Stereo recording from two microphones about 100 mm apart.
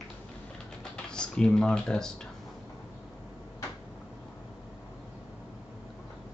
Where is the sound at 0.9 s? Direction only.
10° left (ahead or behind).